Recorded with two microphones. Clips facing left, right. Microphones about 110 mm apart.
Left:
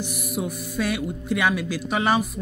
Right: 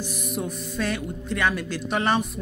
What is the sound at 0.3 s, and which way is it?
Speech, 10° left (ahead or behind).